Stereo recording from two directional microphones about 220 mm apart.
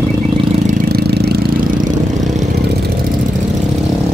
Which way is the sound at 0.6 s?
45° right (ahead or behind).